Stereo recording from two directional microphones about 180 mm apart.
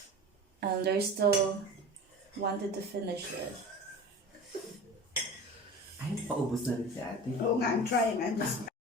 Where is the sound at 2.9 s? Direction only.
65° right (ahead or behind).